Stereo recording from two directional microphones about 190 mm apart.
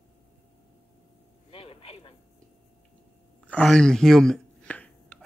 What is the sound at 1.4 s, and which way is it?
Vehicle, 30° left (ahead or behind).